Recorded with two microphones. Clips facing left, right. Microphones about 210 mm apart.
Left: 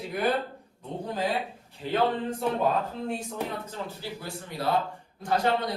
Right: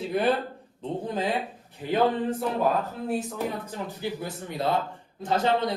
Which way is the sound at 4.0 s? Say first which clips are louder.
Right 5 dB; 20° right (ahead or behind).